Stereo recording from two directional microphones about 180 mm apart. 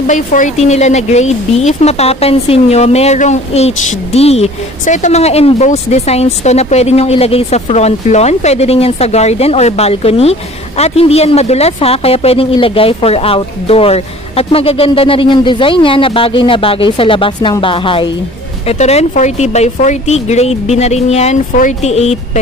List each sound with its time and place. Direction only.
0.0 s a woman's voice: 45° left (ahead or behind)